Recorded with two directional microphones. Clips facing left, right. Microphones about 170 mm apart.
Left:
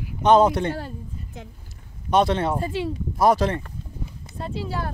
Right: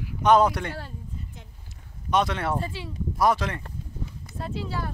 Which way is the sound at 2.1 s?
30° left (ahead or behind).